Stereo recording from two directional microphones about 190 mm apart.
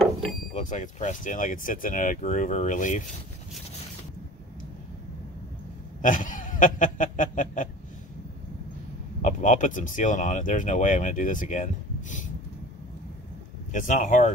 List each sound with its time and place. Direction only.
0.0 s vehicle: 5° left (ahead or behind)
0.6 s speech: 40° left (ahead or behind)
6.0 s speech: 45° left (ahead or behind)
9.2 s speech: 40° left (ahead or behind)
13.7 s speech: 40° left (ahead or behind)